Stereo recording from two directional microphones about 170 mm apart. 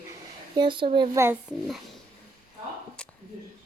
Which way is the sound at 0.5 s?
30° right (ahead or behind).